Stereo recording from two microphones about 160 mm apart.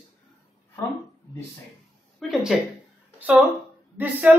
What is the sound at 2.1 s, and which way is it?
A woman's voice, centre (ahead or behind).